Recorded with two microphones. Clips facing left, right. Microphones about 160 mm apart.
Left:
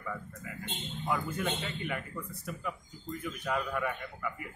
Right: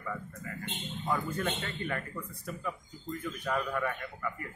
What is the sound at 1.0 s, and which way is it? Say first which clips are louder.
Speech: right 1 dB; 5° left (ahead or behind).